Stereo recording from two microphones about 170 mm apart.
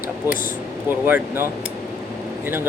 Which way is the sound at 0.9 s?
10° right (ahead or behind).